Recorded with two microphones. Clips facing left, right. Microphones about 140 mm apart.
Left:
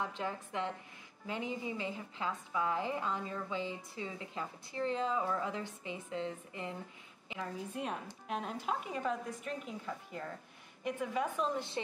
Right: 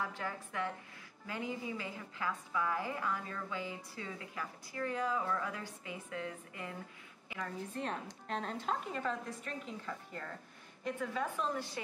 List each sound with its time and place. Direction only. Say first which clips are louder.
0.0 s a woman's voice: left 2 dB; 20° left (ahead or behind)
7.7 s a woman's voice: even; 10° left (ahead or behind)